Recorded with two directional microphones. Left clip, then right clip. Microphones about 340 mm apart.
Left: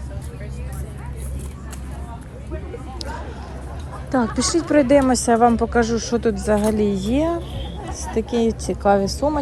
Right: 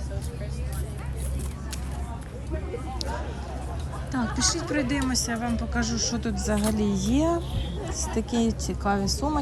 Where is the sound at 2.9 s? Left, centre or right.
Centre.